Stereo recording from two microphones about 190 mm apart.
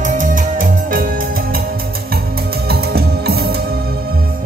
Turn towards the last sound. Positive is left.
turn(degrees=-55)  # may be behind; listen again after turning